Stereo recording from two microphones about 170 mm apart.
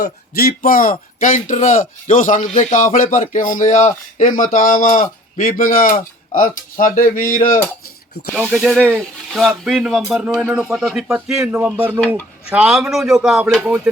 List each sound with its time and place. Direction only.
0.0 s speech: 60° left (ahead or behind)
8.4 s speech: 5° right (ahead or behind)
11.9 s speech: 5° left (ahead or behind)
12.5 s speech: 5° right (ahead or behind)